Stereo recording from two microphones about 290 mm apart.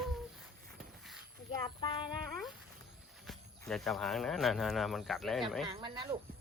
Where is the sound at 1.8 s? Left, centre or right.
Centre.